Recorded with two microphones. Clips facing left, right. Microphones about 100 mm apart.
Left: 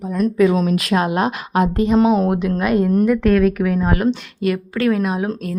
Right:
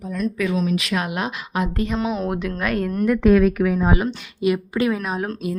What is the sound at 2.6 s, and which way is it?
Speech, 15° left (ahead or behind).